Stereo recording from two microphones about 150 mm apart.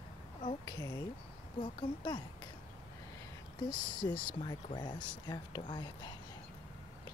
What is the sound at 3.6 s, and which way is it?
Speech, 30° left (ahead or behind).